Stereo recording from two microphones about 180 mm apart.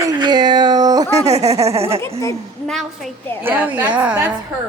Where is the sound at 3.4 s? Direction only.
10° right (ahead or behind).